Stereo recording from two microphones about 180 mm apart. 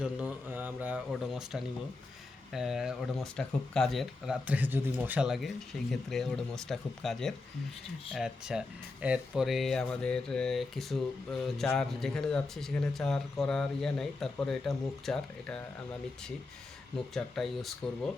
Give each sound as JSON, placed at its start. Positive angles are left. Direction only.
{"t": 0.0, "sound": "mantra", "side_deg": -10}
{"t": 1.1, "sound": "speech", "side_deg": 0}
{"t": 17.2, "sound": "speech", "side_deg": 0}